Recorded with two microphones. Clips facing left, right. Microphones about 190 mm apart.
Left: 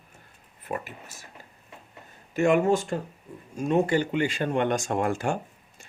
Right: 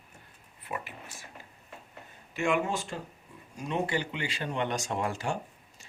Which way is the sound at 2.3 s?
40° left (ahead or behind).